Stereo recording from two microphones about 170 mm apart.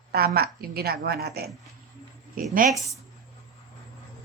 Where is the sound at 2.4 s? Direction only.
55° right (ahead or behind).